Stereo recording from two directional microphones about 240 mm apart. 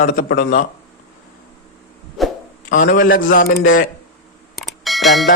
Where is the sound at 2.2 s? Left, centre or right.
Centre.